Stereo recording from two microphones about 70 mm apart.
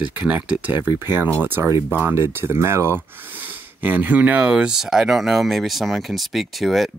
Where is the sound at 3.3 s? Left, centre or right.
Right; by 6.9 s centre.